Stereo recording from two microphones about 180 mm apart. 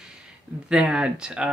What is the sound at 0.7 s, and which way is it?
Speech, 5° right (ahead or behind).